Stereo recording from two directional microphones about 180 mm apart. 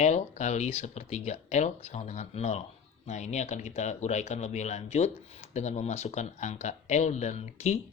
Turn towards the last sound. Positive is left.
turn(degrees=40)  # may be behind; listen again after turning